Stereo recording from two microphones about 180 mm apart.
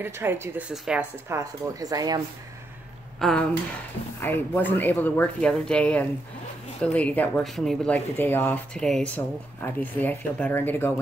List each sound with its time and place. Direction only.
0.0 s speech: 10° right (ahead or behind)
1.4 s speech: 20° right (ahead or behind)
3.2 s speech: centre (ahead or behind)